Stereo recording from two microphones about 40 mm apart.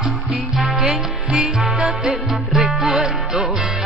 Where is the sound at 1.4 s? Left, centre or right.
Centre.